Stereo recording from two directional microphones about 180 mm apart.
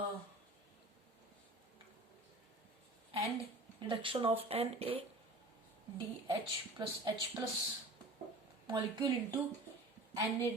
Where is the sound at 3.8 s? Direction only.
30° right (ahead or behind).